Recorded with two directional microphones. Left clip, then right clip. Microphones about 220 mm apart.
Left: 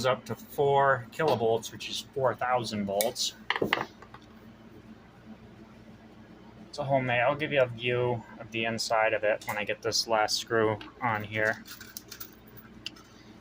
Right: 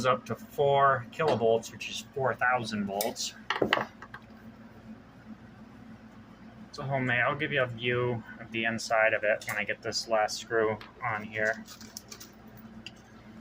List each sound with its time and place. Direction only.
0.0 s speech: 15° left (ahead or behind)
3.0 s cutlery: centre (ahead or behind)
6.7 s speech: 15° left (ahead or behind); by 11.5 s 30° left (ahead or behind)